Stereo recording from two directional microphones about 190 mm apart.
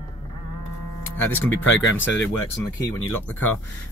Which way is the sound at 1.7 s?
80° left.